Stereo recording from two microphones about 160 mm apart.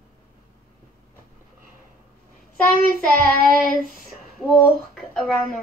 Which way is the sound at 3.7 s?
60° left (ahead or behind).